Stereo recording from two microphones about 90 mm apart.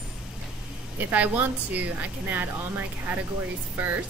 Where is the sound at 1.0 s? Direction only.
20° right (ahead or behind).